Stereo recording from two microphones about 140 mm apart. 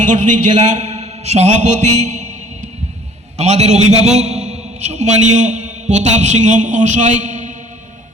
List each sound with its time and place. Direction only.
0.0 s a man's voice: 65° right (ahead or behind)
0.8 s music: 55° right (ahead or behind)
3.3 s a man's voice: 55° right (ahead or behind)